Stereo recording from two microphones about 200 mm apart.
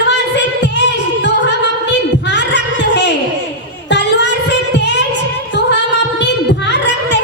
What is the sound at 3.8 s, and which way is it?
Music, 60° left (ahead or behind).